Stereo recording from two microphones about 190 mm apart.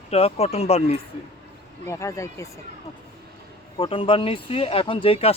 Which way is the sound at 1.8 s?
15° left (ahead or behind).